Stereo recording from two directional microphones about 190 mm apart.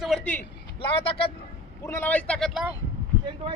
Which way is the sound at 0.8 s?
30° left (ahead or behind).